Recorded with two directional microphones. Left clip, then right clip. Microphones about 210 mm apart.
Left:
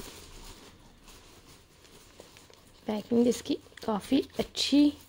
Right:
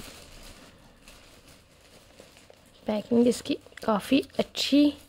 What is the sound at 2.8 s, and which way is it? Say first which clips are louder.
Speech: right 3 dB; 10° right (ahead or behind).